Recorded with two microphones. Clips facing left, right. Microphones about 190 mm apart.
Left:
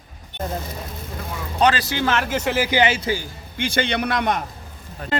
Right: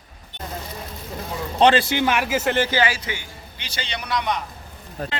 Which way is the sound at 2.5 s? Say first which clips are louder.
Left 2 dB; 10° left (ahead or behind).